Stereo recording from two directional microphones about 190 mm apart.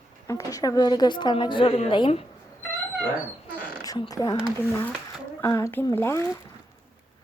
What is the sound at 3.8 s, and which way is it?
Speech, 20° left (ahead or behind).